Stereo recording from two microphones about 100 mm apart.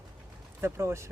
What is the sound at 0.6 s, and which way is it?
Speech, 25° right (ahead or behind).